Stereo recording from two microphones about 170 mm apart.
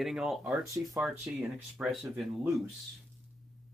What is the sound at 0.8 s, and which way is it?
Speech, 15° right (ahead or behind).